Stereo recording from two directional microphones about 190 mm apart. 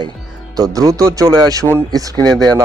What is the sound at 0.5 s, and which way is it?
Speech, 20° right (ahead or behind).